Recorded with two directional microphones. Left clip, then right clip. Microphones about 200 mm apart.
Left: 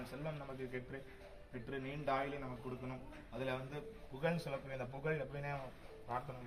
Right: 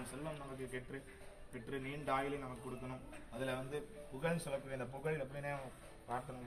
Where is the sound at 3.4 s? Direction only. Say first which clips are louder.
Right 1 dB; 50° left (ahead or behind).